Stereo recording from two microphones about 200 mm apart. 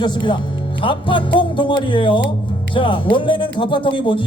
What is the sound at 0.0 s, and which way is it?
Speech, 20° left (ahead or behind).